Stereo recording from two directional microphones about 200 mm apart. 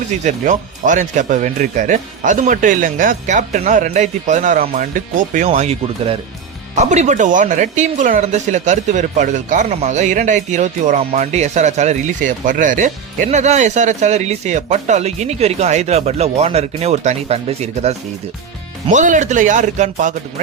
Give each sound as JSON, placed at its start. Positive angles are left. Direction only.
{"t": 0.1, "sound": "speech", "side_deg": -40}
{"t": 5.5, "sound": "speech", "side_deg": -30}